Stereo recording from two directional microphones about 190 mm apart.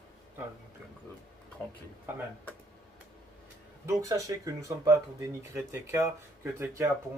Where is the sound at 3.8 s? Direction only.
15° right (ahead or behind).